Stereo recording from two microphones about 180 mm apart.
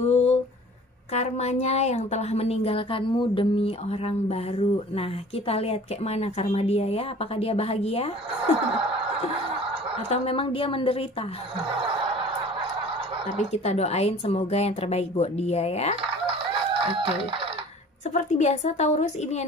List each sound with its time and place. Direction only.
0.0 s a sound: 35° left (ahead or behind)
1.1 s a woman's voice: 40° left (ahead or behind)
10.0 s a woman's voice: 35° left (ahead or behind)
11.8 s a sound: 30° right (ahead or behind)
13.4 s a woman's voice: 35° left (ahead or behind)
16.3 s fowl: 30° right (ahead or behind)
18.1 s a woman's voice: 40° left (ahead or behind)